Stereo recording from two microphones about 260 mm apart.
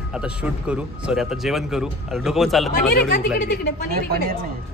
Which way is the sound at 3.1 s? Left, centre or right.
Left.